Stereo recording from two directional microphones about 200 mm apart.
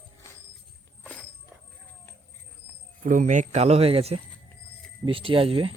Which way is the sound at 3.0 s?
40° right (ahead or behind).